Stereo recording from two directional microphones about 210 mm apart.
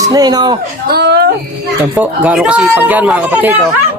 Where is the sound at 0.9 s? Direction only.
50° right (ahead or behind).